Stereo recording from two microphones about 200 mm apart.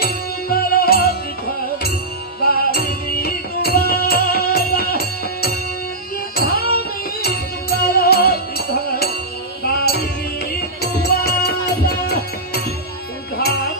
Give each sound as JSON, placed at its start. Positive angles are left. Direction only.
{"t": 0.0, "sound": "music", "side_deg": 50}
{"t": 2.4, "sound": "music", "side_deg": 50}